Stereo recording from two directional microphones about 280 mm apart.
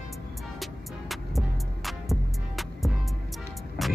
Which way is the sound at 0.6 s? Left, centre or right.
Centre.